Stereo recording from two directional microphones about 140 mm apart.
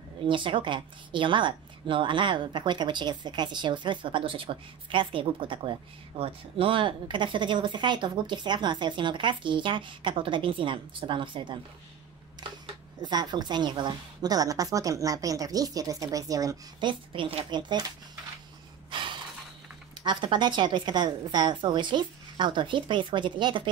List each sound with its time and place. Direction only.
0.3 s a woman's voice: 35° right (ahead or behind)
13.0 s a woman's voice: 30° right (ahead or behind)
17.1 s a woman's voice: 40° right (ahead or behind)
18.9 s gasp: 35° right (ahead or behind)
20.0 s a woman's voice: 35° right (ahead or behind)